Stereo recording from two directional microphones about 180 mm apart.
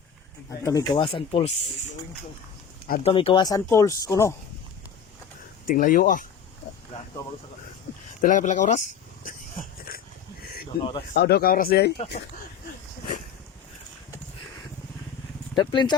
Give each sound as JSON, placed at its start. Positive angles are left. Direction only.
{"t": 0.6, "sound": "speech", "side_deg": 20}
{"t": 0.9, "sound": "speech", "side_deg": 30}
{"t": 3.0, "sound": "speech", "side_deg": 30}
{"t": 5.6, "sound": "speech", "side_deg": 45}
{"t": 8.2, "sound": "speech", "side_deg": 45}
{"t": 9.2, "sound": "a sound", "side_deg": 50}
{"t": 11.1, "sound": "speech", "side_deg": 60}
{"t": 15.5, "sound": "speech", "side_deg": 25}